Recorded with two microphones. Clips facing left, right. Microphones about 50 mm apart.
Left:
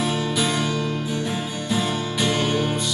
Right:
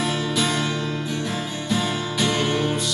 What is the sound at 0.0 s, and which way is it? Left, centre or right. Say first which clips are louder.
Music: even; centre.